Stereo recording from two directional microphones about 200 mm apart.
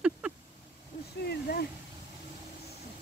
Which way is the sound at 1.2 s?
50° left (ahead or behind).